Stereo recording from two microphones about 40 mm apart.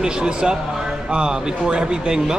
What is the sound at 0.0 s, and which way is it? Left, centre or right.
Speech, right.